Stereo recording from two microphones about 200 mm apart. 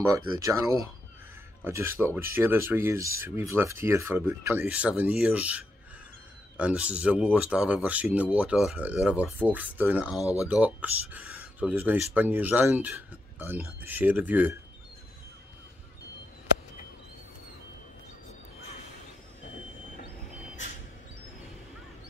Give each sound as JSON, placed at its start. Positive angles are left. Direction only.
{"t": 0.4, "sound": "speech", "side_deg": -15}
{"t": 10.2, "sound": "speech", "side_deg": 15}
{"t": 10.5, "sound": "speech", "side_deg": -5}